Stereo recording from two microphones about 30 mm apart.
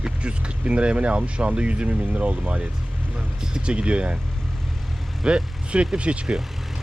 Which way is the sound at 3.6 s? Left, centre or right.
Right.